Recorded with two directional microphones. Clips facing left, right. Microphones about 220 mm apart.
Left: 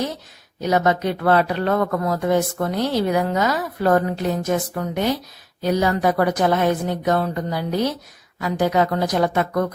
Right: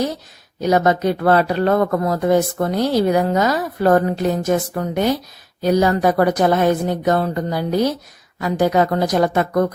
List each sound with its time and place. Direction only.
0.7 s speech: 40° right (ahead or behind)